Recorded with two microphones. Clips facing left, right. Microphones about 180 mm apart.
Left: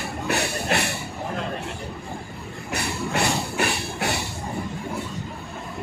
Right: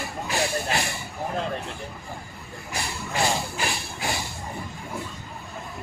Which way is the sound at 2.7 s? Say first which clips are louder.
Left 3 dB; 65° left (ahead or behind).